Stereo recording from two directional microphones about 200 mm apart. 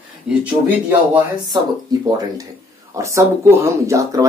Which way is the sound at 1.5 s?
20° right (ahead or behind).